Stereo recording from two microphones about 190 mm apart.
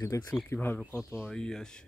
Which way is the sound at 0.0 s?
20° left (ahead or behind).